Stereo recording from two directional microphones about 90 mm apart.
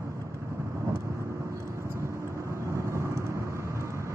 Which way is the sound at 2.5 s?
35° right (ahead or behind).